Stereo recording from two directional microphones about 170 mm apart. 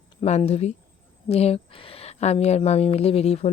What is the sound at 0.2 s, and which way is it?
A woman's voice, 40° left (ahead or behind).